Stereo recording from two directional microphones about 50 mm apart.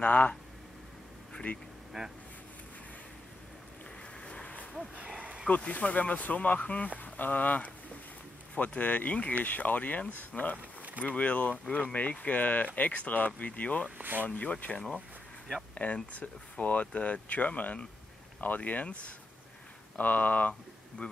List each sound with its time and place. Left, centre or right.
0.0 s speech: left
1.3 s vehicle: left
1.9 s speech: centre
4.2 s vehicle: left
4.9 s a sound: right
5.6 s speech: left
10.8 s vehicle: right
11.1 s speech: left
15.7 s speech: left